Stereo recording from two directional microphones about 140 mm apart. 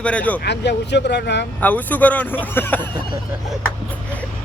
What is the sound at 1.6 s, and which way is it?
Speech, 10° left (ahead or behind).